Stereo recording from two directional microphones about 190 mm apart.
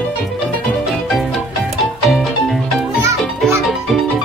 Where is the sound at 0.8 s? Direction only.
Centre (ahead or behind).